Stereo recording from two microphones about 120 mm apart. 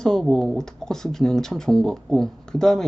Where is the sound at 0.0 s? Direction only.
Centre (ahead or behind).